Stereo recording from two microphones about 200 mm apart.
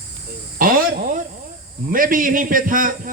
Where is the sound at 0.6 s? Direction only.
40° right (ahead or behind).